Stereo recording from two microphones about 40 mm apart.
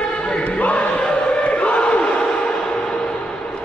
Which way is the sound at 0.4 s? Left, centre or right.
Left.